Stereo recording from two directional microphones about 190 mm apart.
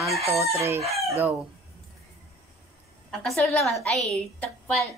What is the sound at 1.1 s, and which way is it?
Speech, 10° right (ahead or behind).